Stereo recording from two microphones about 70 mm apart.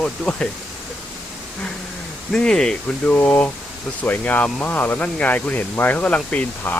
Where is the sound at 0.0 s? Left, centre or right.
Centre.